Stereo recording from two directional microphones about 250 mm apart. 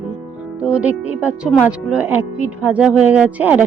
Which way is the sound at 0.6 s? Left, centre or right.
Centre.